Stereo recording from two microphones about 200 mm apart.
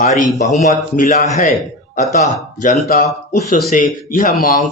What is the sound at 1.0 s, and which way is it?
Speech, 40° left (ahead or behind).